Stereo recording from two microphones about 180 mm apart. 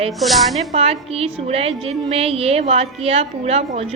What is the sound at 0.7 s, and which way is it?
A woman's voice, 35° right (ahead or behind).